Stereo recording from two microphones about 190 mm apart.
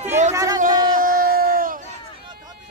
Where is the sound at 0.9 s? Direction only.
50° right (ahead or behind).